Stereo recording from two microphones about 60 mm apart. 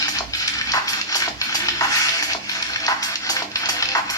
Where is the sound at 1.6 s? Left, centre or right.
Left.